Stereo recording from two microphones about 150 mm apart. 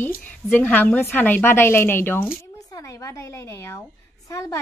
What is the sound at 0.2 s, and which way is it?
A woman's voice, 10° left (ahead or behind).